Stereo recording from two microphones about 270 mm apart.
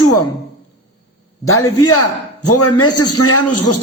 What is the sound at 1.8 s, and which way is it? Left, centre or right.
A man's voice, left.